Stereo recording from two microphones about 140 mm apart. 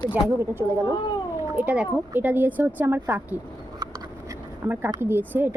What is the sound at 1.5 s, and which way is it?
Speech, 10° right (ahead or behind).